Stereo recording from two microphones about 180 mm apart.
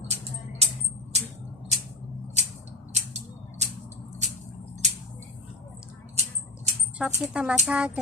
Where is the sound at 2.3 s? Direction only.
40° right (ahead or behind).